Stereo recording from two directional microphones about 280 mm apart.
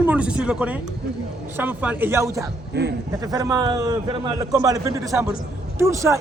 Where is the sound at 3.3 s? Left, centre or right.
Centre.